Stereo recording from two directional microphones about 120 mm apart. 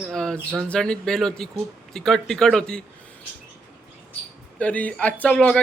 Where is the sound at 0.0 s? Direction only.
5° left (ahead or behind).